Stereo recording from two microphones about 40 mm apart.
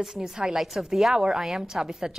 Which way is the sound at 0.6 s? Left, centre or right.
Centre.